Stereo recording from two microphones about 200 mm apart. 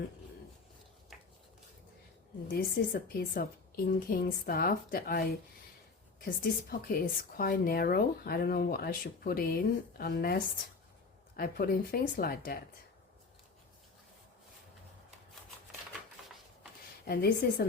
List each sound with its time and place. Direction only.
2.5 s a woman's voice: 45° left (ahead or behind)
6.2 s a woman's voice: 45° left (ahead or behind)
17.1 s a woman's voice: 50° left (ahead or behind)